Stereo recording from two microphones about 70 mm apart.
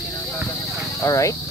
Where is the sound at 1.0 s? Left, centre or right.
Left.